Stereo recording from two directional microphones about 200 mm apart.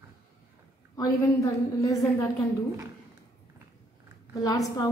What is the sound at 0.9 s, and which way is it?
A woman's voice, 15° left (ahead or behind).